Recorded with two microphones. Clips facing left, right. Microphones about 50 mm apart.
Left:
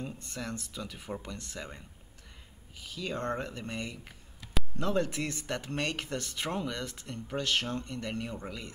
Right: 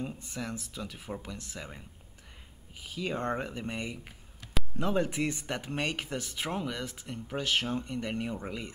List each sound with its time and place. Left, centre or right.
0.0 s speech: centre
2.7 s speech: centre